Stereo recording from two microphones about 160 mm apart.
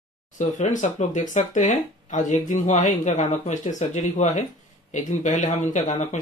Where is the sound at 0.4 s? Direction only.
50° left (ahead or behind).